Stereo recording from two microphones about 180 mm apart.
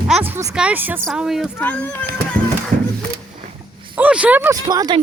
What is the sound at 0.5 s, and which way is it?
Speech, 10° right (ahead or behind).